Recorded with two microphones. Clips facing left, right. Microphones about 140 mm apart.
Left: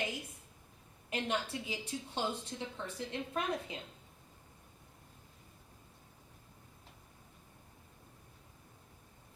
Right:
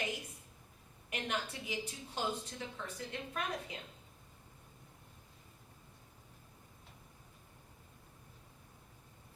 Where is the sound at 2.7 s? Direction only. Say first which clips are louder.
Left 4 dB; 25° left (ahead or behind).